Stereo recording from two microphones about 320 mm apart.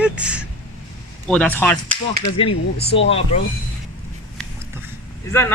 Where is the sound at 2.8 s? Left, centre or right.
Left.